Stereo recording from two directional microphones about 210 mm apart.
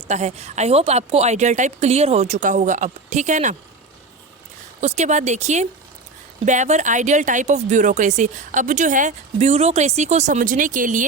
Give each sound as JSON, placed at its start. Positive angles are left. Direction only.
{"t": 0.1, "sound": "speech", "side_deg": -30}
{"t": 4.8, "sound": "speech", "side_deg": -35}